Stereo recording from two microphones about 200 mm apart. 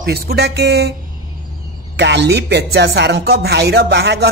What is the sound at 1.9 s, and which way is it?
Speech, 60° right (ahead or behind).